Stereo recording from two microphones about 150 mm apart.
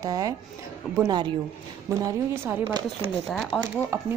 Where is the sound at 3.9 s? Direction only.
20° right (ahead or behind).